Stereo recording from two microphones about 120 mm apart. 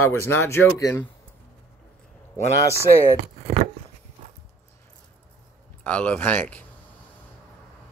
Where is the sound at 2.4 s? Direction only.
25° left (ahead or behind).